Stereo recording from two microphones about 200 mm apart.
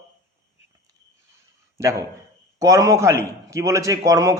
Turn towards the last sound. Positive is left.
turn(degrees=-15)  # may be behind; listen again after turning